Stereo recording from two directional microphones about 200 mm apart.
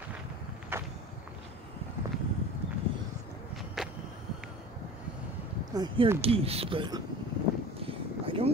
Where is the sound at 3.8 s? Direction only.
Centre (ahead or behind).